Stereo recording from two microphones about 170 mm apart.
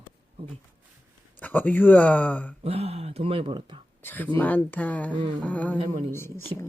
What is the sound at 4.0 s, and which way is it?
Speech, 10° left (ahead or behind).